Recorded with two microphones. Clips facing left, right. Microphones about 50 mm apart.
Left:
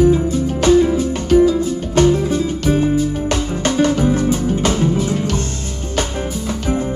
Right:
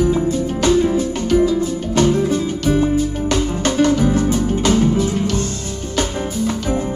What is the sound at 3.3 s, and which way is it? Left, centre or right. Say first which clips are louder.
Music: even; left.